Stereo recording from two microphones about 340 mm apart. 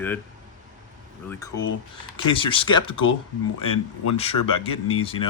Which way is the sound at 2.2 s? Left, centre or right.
Centre.